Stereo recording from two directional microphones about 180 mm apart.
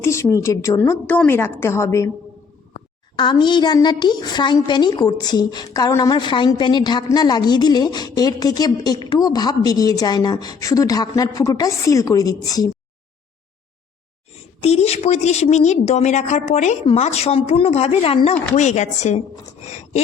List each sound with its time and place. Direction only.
0.0 s a woman's voice: 15° left (ahead or behind)
14.6 s a woman's voice: 35° left (ahead or behind)